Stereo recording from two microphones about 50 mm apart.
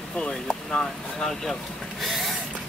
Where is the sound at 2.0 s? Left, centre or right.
Centre.